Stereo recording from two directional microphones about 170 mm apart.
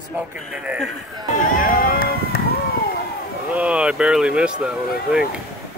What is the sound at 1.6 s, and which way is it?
Run, 55° left (ahead or behind).